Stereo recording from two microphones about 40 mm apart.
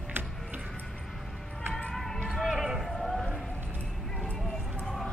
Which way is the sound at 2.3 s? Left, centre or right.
Centre.